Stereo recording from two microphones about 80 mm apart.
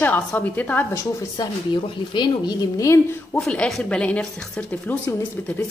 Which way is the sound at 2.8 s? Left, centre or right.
Left.